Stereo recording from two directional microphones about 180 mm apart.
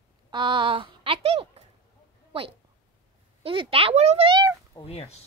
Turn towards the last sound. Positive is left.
turn(degrees=35)  # may be behind; listen again after turning